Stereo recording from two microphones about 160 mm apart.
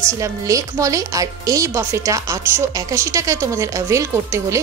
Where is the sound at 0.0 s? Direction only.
20° right (ahead or behind).